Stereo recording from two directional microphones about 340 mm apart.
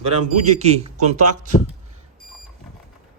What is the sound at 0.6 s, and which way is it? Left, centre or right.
Speech, centre.